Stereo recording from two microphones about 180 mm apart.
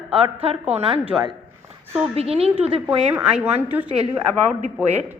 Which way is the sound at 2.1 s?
35° right (ahead or behind).